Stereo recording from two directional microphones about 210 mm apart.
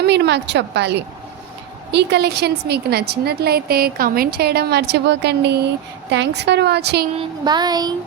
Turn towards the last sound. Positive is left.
turn(degrees=-20)  # may be behind; listen again after turning